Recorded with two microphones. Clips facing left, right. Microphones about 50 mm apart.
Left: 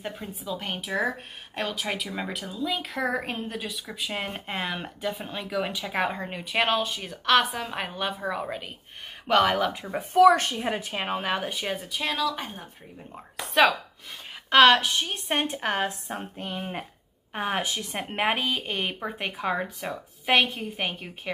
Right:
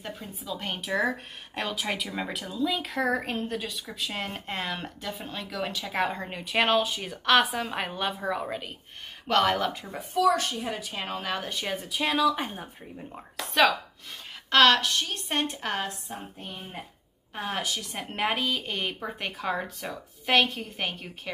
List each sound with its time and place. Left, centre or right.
0.0 s speech: centre
0.4 s speech: centre
10.1 s speech: left; by 12.6 s centre
13.4 s speech: centre; by 15.9 s left
16.1 s a sound: left
17.3 s a woman's voice: left; by 21.1 s centre